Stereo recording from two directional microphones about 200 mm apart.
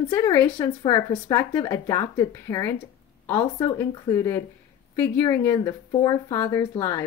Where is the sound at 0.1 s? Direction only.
15° left (ahead or behind).